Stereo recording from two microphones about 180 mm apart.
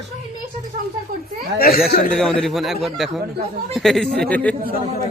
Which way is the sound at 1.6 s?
55° left (ahead or behind).